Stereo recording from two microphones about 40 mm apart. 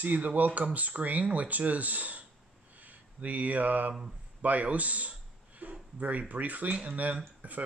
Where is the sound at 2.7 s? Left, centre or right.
Right.